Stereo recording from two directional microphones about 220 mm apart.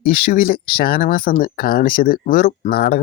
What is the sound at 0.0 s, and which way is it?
Speech, 40° left (ahead or behind).